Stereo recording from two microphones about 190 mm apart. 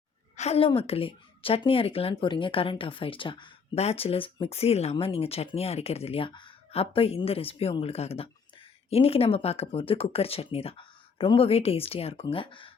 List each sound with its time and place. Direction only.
0.3 s speech: 35° left (ahead or behind)